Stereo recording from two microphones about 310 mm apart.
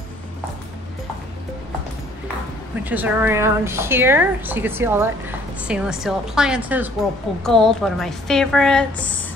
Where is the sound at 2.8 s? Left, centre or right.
Centre.